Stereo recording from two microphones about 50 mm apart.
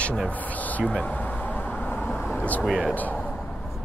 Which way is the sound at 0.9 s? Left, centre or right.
Left.